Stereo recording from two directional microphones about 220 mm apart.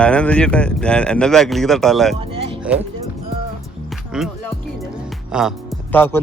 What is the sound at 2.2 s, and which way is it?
Speech, 25° right (ahead or behind).